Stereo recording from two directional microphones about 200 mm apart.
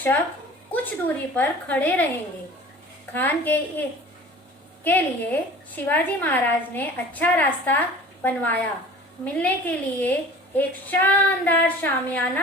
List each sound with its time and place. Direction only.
0.7 s a woman's voice: 10° left (ahead or behind)
3.1 s a woman's voice: 10° left (ahead or behind)